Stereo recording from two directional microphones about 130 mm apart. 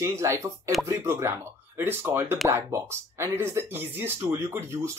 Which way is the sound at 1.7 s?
20° right (ahead or behind).